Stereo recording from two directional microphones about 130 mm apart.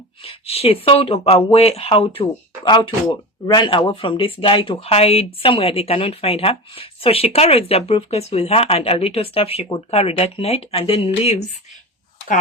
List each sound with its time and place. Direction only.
0.2 s speech: 50° left (ahead or behind)
2.6 s speech: 35° left (ahead or behind); by 11.4 s 55° left (ahead or behind)